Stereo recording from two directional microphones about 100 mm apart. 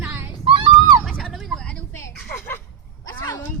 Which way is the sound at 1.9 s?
30° left (ahead or behind).